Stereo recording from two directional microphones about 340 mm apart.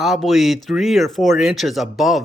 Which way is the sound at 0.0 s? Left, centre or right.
Centre.